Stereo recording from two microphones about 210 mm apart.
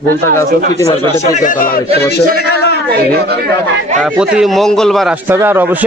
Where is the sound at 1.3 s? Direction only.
40° left (ahead or behind).